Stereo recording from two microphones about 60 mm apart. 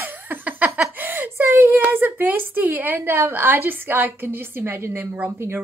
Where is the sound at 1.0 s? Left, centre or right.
Right.